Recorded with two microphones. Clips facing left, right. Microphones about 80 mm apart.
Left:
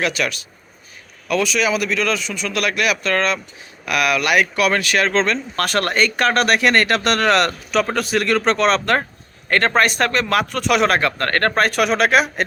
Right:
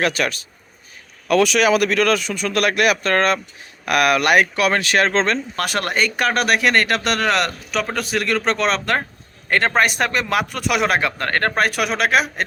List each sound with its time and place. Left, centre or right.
0.0 s speech: right
1.3 s speech: right
5.5 s a man's voice: centre